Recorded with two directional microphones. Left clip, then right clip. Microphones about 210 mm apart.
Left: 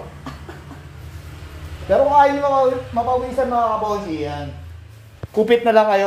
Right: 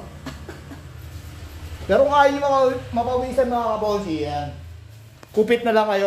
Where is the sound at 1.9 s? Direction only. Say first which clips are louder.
Left 2 dB; 20° right (ahead or behind).